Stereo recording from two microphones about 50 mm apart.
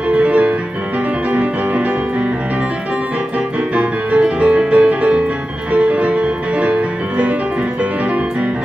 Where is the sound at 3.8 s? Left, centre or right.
Right.